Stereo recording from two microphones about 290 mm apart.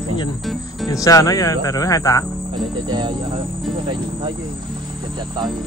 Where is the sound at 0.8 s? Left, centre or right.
Centre.